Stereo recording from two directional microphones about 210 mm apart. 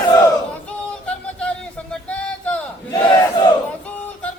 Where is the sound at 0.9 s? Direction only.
5° left (ahead or behind).